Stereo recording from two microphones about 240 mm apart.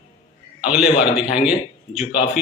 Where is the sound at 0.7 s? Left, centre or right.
Centre.